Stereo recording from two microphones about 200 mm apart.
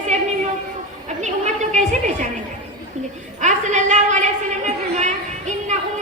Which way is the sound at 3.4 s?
35° right (ahead or behind).